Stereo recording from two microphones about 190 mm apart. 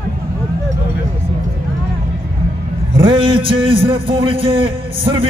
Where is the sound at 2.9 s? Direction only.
30° right (ahead or behind).